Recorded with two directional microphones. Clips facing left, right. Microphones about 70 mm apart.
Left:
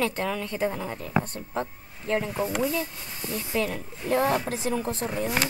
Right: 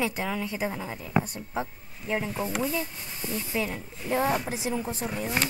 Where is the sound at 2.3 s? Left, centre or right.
Centre.